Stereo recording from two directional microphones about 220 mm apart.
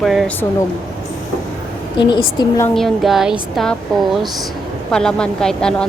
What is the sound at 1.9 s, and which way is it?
Speech, 20° left (ahead or behind).